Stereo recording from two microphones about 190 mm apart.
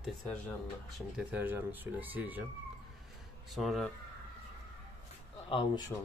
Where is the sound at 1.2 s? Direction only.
10° right (ahead or behind).